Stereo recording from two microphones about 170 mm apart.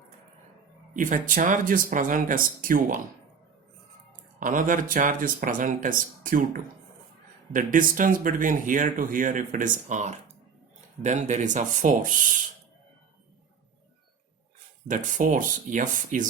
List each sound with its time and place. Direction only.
0.9 s speech: 50° right (ahead or behind)
4.4 s speech: 50° right (ahead or behind)
14.8 s speech: 50° right (ahead or behind)